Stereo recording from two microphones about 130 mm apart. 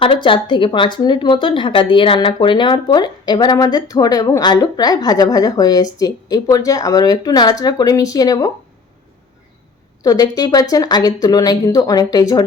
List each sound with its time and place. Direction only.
0.0 s speech: 40° left (ahead or behind)
10.0 s speech: 30° left (ahead or behind)